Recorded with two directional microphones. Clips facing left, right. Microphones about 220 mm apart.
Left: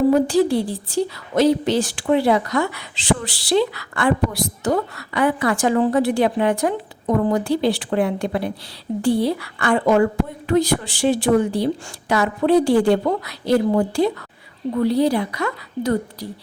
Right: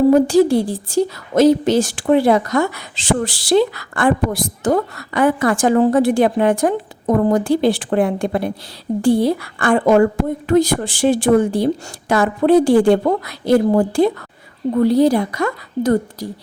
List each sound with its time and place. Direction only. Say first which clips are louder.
0.1 s a woman's voice: right 4 dB; 45° right (ahead or behind)